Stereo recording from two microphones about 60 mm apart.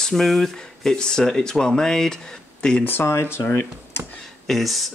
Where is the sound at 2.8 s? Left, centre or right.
Left.